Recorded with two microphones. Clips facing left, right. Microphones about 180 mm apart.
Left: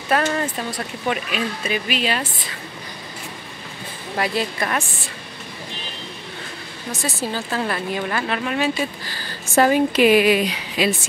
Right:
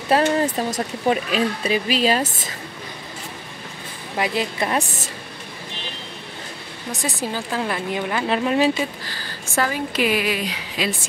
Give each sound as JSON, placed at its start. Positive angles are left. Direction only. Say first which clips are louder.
{"t": 0.2, "sound": "a woman's voice", "louder": "right 3 dB", "side_deg": -25}
{"t": 0.6, "sound": "speech", "louder": "right 4 dB", "side_deg": -40}
{"t": 4.2, "sound": "a woman's voice", "louder": "even", "side_deg": -20}
{"t": 4.7, "sound": "speech", "louder": "right 2 dB", "side_deg": -40}
{"t": 7.0, "sound": "speech", "louder": "left 1 dB", "side_deg": -15}
{"t": 8.3, "sound": "a woman's voice", "louder": "right 7 dB", "side_deg": -30}
{"t": 9.6, "sound": "a woman's voice", "louder": "left 7 dB", "side_deg": 20}